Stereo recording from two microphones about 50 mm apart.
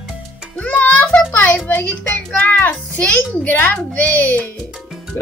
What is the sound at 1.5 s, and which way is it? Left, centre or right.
A woman's voice, left.